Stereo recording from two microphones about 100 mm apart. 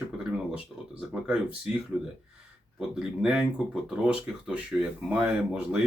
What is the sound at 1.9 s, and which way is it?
Speech, 5° right (ahead or behind).